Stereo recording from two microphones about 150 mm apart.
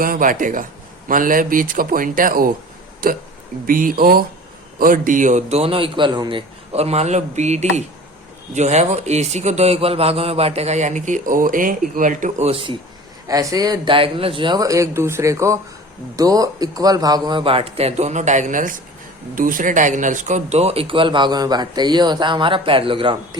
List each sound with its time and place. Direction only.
0.0 s a man's voice: 65° right (ahead or behind)
4.8 s a man's voice: 65° right (ahead or behind)
12.5 s speech: 35° right (ahead or behind)
13.2 s speech: 20° right (ahead or behind)